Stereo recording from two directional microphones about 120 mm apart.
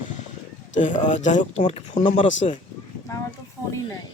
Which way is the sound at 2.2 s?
80° left.